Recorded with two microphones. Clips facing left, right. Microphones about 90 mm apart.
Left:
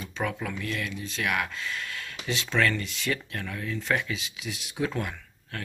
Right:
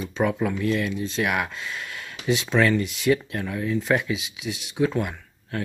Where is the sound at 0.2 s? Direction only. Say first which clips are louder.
Right 8 dB; 20° right (ahead or behind).